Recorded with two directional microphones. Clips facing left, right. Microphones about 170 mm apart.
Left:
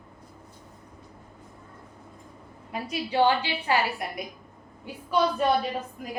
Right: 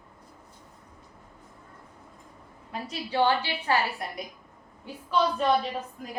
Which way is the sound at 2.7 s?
15° left (ahead or behind).